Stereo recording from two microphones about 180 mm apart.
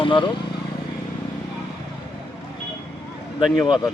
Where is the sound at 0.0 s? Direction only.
25° left (ahead or behind).